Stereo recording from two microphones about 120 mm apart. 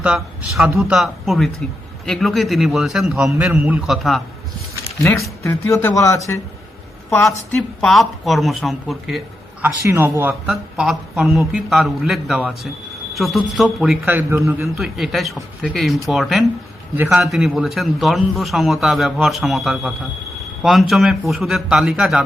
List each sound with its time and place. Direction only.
0.0 s a man's voice: 10° right (ahead or behind)
3.8 s a man's voice: centre (ahead or behind)
4.9 s speech: 25° left (ahead or behind)
7.5 s a man's voice: 5° left (ahead or behind)
9.6 s speech: 20° right (ahead or behind)
10.5 s a man's voice: 5° right (ahead or behind)
14.0 s a man's voice: 15° right (ahead or behind)
14.8 s a man's voice: centre (ahead or behind)
17.0 s speech: 15° right (ahead or behind)
17.2 s a man's voice: centre (ahead or behind)